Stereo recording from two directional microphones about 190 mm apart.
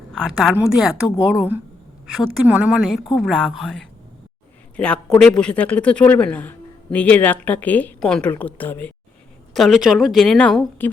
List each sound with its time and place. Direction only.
0.1 s a woman's voice: centre (ahead or behind)
9.6 s a woman's voice: centre (ahead or behind)